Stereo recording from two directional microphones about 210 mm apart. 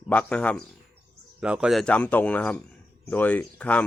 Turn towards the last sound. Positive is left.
turn(degrees=5)  # may be behind; listen again after turning